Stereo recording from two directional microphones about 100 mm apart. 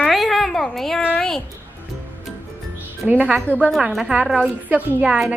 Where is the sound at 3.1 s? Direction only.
15° right (ahead or behind).